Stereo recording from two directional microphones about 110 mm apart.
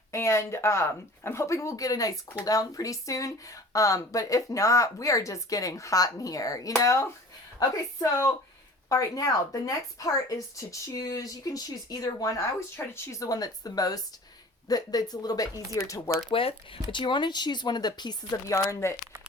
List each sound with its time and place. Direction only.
0.1 s speech: 25° left (ahead or behind)
16.3 s speech: 55° left (ahead or behind)
16.9 s speech: 45° left (ahead or behind)
18.5 s speech: 25° left (ahead or behind)